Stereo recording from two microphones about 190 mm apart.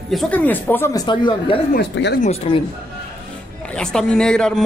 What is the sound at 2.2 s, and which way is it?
Speech, 30° left (ahead or behind).